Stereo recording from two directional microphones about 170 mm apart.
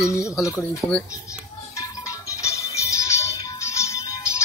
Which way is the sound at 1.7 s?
20° left (ahead or behind).